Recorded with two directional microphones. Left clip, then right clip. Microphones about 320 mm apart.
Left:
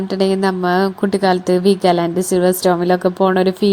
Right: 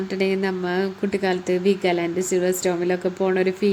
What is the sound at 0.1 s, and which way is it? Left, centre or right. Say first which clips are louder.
A woman's voice: left 7 dB; centre.